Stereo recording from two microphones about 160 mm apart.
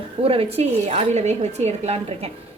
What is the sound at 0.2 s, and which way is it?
Speech, 35° right (ahead or behind).